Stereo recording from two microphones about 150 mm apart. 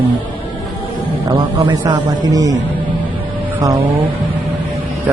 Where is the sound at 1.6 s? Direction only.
30° right (ahead or behind).